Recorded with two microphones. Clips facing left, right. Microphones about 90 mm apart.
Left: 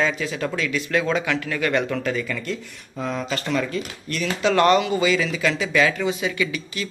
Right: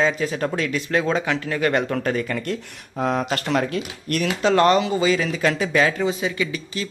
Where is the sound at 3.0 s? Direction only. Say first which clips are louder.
Right 4 dB; 55° right (ahead or behind).